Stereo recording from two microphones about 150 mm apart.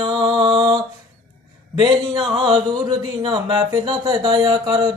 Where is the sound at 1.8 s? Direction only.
30° right (ahead or behind).